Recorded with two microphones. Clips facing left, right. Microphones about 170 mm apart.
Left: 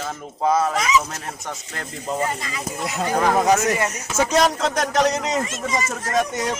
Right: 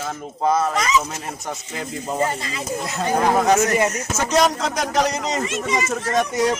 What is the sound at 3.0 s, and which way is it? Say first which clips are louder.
Speech: right 1 dB; 15° right (ahead or behind).